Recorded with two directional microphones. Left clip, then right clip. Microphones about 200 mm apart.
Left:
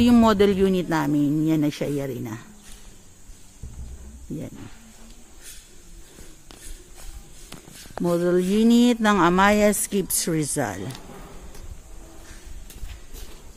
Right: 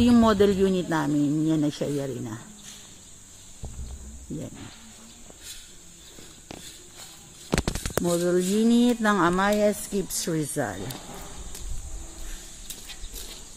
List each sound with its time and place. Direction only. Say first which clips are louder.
0.2 s a man's voice: left 2 dB; 10° left (ahead or behind)
8.0 s a woman's voice: left 3 dB; 25° left (ahead or behind)
9.3 s a woman's voice: left 4 dB; 30° left (ahead or behind)